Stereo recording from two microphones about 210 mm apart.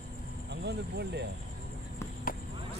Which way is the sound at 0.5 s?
55° right (ahead or behind).